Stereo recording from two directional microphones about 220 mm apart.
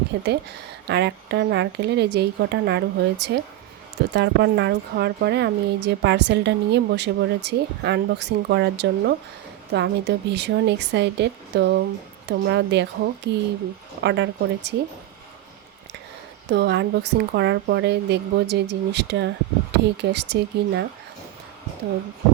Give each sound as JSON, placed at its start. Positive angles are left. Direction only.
{"t": 0.1, "sound": "a woman's voice", "side_deg": -50}
{"t": 16.5, "sound": "a woman's voice", "side_deg": -50}